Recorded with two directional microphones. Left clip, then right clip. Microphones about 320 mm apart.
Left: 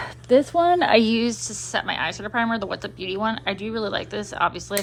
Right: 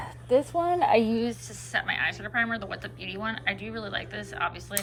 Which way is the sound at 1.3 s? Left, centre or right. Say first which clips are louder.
Left 5 dB; centre.